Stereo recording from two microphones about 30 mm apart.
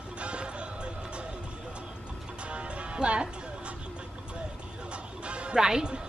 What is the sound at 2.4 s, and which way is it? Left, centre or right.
Music, right.